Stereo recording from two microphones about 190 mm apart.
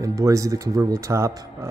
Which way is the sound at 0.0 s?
15° right (ahead or behind).